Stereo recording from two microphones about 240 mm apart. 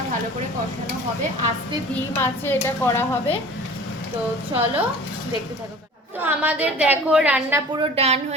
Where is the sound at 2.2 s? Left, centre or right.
Centre.